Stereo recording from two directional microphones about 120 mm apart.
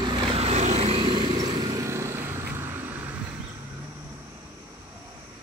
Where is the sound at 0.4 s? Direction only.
65° right (ahead or behind); by 3.2 s 20° right (ahead or behind).